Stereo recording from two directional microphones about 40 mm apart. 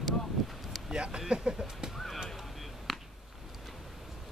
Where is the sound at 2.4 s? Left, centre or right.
Centre.